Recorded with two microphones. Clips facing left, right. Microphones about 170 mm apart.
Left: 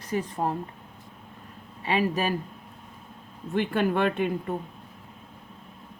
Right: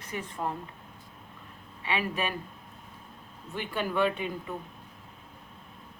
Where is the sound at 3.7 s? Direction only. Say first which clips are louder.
Left 1 dB; 55° left (ahead or behind).